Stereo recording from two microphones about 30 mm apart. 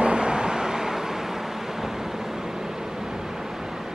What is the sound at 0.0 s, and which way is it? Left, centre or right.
Vehicle, right.